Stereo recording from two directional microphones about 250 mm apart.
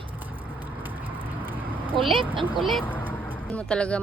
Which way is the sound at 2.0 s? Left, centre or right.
Right.